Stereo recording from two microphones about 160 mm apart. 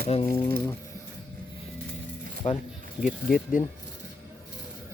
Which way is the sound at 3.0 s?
60° left (ahead or behind).